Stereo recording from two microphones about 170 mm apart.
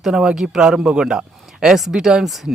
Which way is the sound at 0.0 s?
5° right (ahead or behind).